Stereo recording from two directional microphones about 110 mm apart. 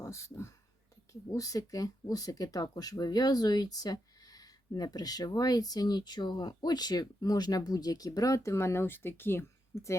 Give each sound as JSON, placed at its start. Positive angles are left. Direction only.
{"t": 0.0, "sound": "speech", "side_deg": 25}